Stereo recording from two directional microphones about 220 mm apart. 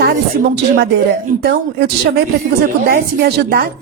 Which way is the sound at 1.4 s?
45° right (ahead or behind).